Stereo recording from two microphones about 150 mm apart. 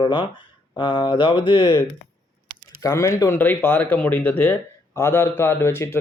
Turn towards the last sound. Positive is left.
turn(degrees=15)  # may be behind; listen again after turning